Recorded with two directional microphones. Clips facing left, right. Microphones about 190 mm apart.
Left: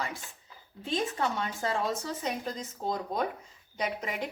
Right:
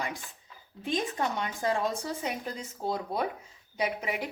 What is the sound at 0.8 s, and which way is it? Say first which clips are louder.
Speech: even; 15° right (ahead or behind).